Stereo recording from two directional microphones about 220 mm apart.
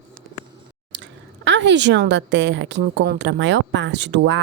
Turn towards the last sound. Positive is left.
turn(degrees=-55)  # may be behind; listen again after turning